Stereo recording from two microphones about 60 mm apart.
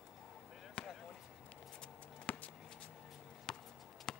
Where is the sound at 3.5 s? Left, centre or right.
Centre.